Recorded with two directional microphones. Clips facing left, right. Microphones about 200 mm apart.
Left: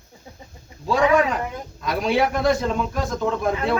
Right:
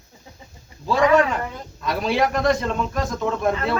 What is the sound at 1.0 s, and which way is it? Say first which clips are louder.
Speech: right 1 dB; 10° left (ahead or behind).